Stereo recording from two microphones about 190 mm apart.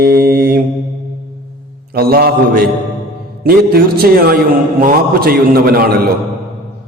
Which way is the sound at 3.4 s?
55° right (ahead or behind).